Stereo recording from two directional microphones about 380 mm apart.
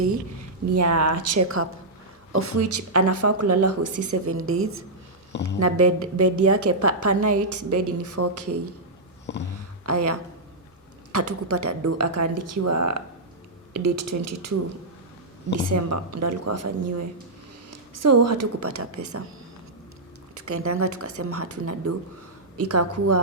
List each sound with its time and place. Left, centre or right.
0.8 s a woman's voice: right
4.1 s a woman's voice: right
5.3 s speech: left
5.5 s a woman's voice: right
9.3 s a sound: left
9.8 s a woman's voice: right
15.5 s a woman's voice: right
20.3 s a woman's voice: right